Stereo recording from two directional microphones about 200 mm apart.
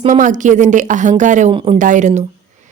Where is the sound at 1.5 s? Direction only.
25° right (ahead or behind).